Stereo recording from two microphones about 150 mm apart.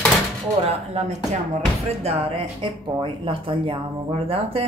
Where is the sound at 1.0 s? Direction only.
45° right (ahead or behind).